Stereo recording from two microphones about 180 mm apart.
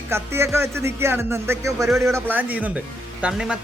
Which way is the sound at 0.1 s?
15° right (ahead or behind).